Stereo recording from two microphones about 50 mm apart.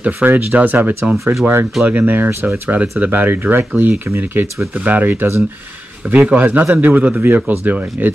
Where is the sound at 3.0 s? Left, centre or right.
Right.